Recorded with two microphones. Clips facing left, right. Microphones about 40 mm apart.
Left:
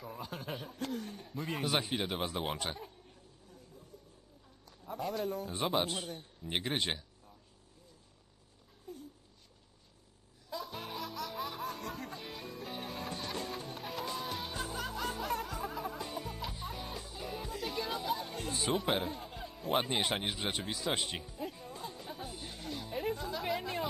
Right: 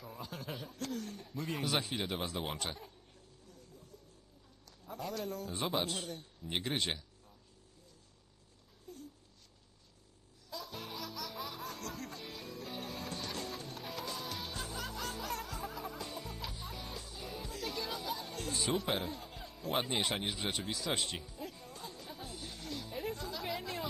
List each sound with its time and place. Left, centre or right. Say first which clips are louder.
0.0 s speech: left 3 dB; centre
4.9 s a man's voice: left 4 dB; centre
8.9 s a sound: left 3 dB; centre
10.5 s music: left 3 dB; centre
16.1 s music: left 3 dB; left
19.8 s speech: left 2 dB; left
20.7 s music: left 1 dB; centre